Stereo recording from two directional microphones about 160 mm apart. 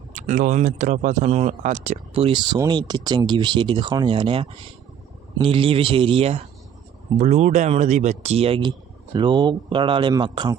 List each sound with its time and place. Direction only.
0.1 s speech: 55° right (ahead or behind); by 10.6 s 30° right (ahead or behind)